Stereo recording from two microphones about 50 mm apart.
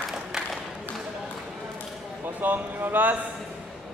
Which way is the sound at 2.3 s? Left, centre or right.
Right.